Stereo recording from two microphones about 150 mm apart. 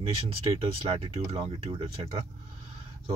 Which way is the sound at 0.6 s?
40° right (ahead or behind).